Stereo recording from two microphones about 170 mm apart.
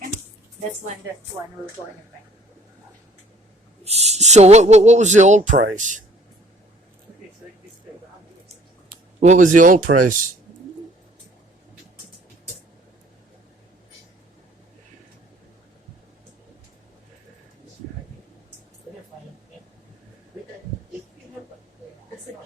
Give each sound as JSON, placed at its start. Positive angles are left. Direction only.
{"t": 3.8, "sound": "speech", "side_deg": -40}
{"t": 9.2, "sound": "speech", "side_deg": -45}